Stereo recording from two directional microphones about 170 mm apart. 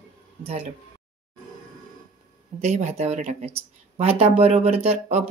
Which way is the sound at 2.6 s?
40° right (ahead or behind).